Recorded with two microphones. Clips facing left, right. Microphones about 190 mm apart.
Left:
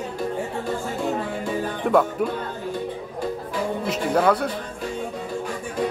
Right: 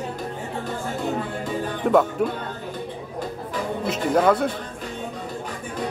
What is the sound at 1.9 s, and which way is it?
Speech, centre (ahead or behind).